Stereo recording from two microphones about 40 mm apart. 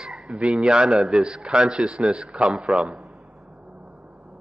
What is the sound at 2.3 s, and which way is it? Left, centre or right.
Speech, right.